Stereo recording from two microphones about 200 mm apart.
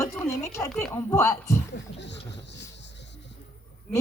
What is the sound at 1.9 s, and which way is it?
Speech, 60° left (ahead or behind).